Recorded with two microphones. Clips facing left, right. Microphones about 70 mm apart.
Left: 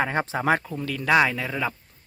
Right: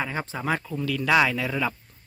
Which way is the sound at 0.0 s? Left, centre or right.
Left.